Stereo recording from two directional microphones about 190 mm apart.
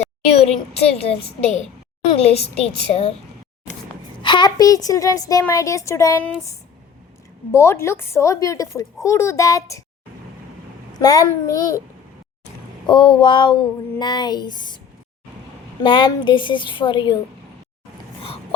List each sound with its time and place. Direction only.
0.3 s a woman's voice: 35° left (ahead or behind)
4.2 s a woman's voice: 25° left (ahead or behind)
7.5 s a woman's voice: 15° left (ahead or behind)
11.0 s a woman's voice: 20° left (ahead or behind)
12.9 s a sound: 25° left (ahead or behind)
15.8 s a sound: 25° left (ahead or behind)